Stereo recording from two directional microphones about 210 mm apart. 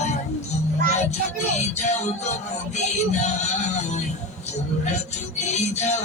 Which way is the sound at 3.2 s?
35° left (ahead or behind).